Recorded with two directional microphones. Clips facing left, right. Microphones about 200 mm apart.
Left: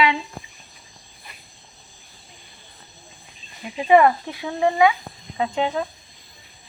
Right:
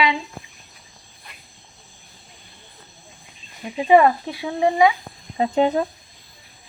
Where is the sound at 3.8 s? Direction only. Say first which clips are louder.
Right 1 dB; 15° right (ahead or behind).